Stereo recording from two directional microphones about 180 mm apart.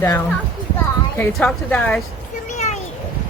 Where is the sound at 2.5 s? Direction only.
40° left (ahead or behind).